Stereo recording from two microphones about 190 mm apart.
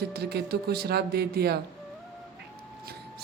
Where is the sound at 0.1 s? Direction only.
55° right (ahead or behind).